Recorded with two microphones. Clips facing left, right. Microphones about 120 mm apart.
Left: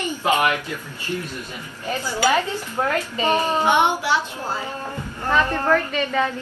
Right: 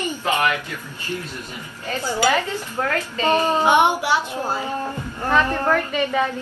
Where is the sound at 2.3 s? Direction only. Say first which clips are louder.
Even; 15° left (ahead or behind).